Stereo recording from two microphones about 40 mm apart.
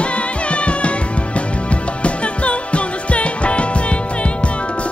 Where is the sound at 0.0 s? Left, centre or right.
Left.